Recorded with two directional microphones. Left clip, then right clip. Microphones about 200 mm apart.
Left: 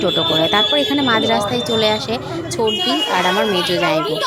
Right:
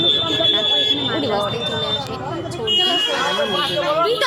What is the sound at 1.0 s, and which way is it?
Speech, 40° left (ahead or behind).